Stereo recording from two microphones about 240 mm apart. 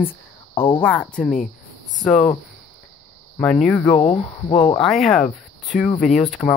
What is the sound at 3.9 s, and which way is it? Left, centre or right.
Speech, left.